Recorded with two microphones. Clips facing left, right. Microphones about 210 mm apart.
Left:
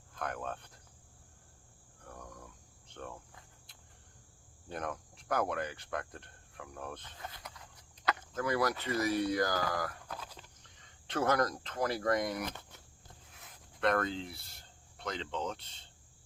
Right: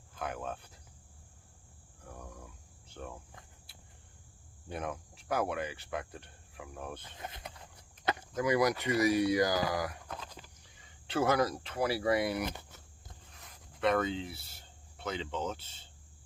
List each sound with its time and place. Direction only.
0.1 s speech: 5° right (ahead or behind)
2.0 s a sound: 5° right (ahead or behind)
2.9 s speech: 5° right (ahead or behind)
4.7 s cricket: 5° right (ahead or behind)
7.0 s a sound: 20° right (ahead or behind)
8.2 s speech: 10° right (ahead or behind)
10.1 s a sound: 5° left (ahead or behind)
10.3 s speech: 5° right (ahead or behind)
13.3 s speech: centre (ahead or behind)